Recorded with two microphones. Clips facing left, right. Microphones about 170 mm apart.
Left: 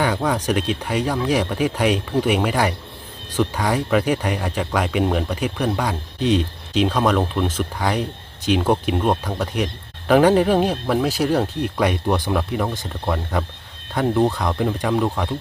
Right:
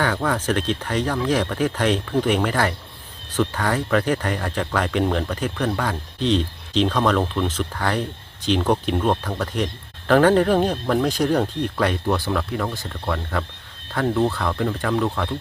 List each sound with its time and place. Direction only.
0.0 s speech: 15° left (ahead or behind)